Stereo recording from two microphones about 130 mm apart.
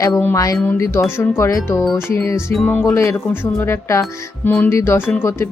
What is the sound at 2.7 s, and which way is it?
Speech, 15° left (ahead or behind).